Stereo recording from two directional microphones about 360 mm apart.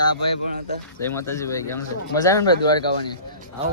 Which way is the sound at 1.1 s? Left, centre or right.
Centre.